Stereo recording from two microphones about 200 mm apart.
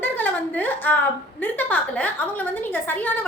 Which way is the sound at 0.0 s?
10° left (ahead or behind).